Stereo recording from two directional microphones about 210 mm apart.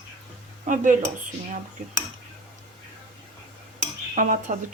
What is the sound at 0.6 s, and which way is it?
Speech, 40° right (ahead or behind).